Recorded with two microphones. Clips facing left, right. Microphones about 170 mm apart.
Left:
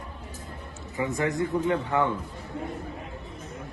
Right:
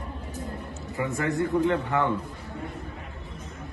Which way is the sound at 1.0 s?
15° left (ahead or behind).